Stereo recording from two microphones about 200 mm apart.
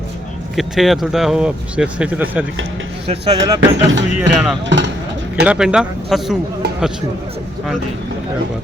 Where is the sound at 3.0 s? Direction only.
30° right (ahead or behind).